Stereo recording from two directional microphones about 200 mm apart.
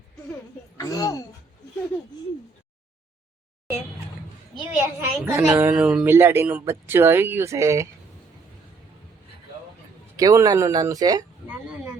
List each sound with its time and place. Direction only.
0.8 s a woman's voice: 15° left (ahead or behind)
4.8 s a woman's voice: 10° right (ahead or behind)
10.2 s a woman's voice: 15° right (ahead or behind)